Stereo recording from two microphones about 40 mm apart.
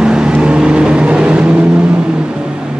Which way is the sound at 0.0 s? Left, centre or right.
Right.